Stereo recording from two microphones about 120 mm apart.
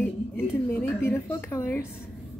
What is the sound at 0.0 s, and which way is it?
A woman's voice, 20° left (ahead or behind).